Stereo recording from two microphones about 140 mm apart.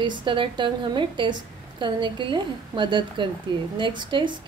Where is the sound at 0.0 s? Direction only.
35° right (ahead or behind).